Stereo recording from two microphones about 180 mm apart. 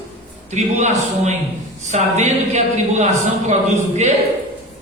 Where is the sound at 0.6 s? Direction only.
40° right (ahead or behind).